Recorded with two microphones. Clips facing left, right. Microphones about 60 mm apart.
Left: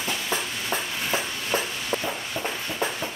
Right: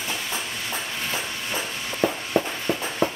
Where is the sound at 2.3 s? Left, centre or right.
Right.